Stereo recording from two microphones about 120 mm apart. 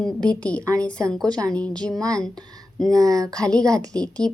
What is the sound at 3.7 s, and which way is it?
Speech, 5° left (ahead or behind).